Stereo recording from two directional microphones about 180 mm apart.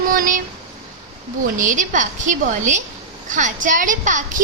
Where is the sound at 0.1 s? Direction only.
50° right (ahead or behind).